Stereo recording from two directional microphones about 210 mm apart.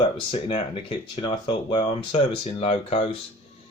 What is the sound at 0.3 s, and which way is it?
Speech, 25° left (ahead or behind).